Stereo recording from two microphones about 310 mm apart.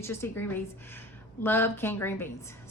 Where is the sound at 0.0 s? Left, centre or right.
Centre.